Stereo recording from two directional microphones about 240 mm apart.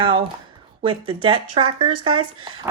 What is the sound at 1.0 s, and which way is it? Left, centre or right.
Speech, right.